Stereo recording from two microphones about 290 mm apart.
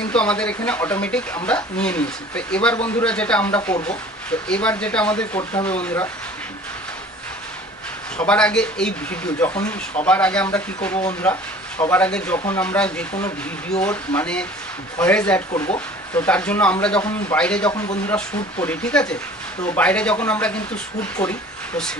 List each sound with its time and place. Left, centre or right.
0.1 s speech: centre
3.7 s speech: left
4.5 s speech: centre
5.4 s speech: centre
8.3 s speech: centre
17.6 s speech: centre